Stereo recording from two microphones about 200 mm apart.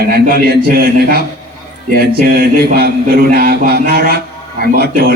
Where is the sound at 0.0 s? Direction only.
45° right (ahead or behind).